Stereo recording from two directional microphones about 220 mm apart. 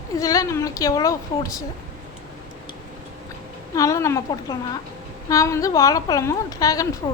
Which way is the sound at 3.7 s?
15° left (ahead or behind).